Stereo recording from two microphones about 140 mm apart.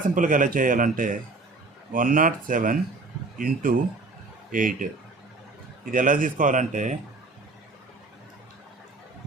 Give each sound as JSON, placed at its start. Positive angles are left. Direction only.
{"t": 0.1, "sound": "speech", "side_deg": -65}
{"t": 3.3, "sound": "a man's voice", "side_deg": -85}
{"t": 4.5, "sound": "speech", "side_deg": -70}